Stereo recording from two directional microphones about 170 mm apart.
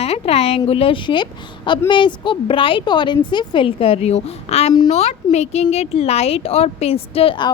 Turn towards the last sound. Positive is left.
turn(degrees=30)  # may be behind; listen again after turning